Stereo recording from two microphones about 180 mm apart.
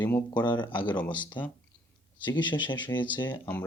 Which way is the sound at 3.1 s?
25° left (ahead or behind).